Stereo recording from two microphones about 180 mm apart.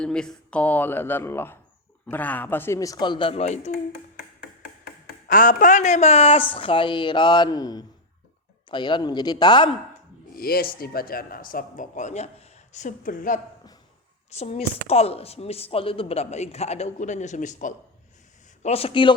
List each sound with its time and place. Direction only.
0.0 s a man's voice: 5° left (ahead or behind); by 3.7 s 40° left (ahead or behind)
5.0 s a woman's voice: 50° left (ahead or behind); by 9.6 s 25° left (ahead or behind)
10.3 s speech: 55° left (ahead or behind)
14.3 s speech: 35° left (ahead or behind)
18.6 s speech: 35° left (ahead or behind)